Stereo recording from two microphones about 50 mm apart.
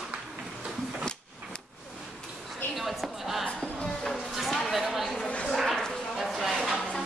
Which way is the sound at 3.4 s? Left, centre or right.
Left.